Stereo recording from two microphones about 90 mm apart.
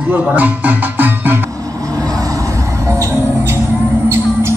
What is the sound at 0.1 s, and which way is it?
Speech, 15° right (ahead or behind).